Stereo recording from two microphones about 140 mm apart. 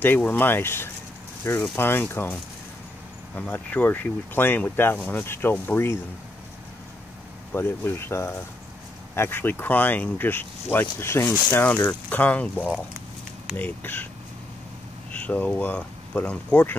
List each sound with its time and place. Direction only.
0.0 s speech: 15° left (ahead or behind)
3.3 s speech: 10° left (ahead or behind)
7.5 s speech: 15° left (ahead or behind)
15.1 s speech: 10° left (ahead or behind)